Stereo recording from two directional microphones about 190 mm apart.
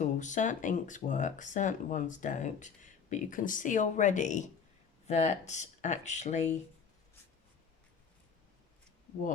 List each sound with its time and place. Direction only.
0.0 s speech: 40° left (ahead or behind)